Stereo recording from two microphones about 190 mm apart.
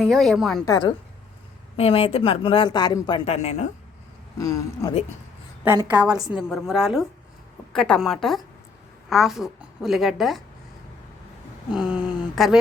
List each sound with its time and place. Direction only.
0.0 s a woman's voice: centre (ahead or behind)
0.6 s speech: 20° left (ahead or behind)
3.2 s a woman's voice: 35° left (ahead or behind)
4.4 s speech: 15° left (ahead or behind)
5.6 s a woman's voice: 15° right (ahead or behind)
6.3 s a woman's voice: 5° right (ahead or behind)
11.7 s a woman's voice: 5° right (ahead or behind)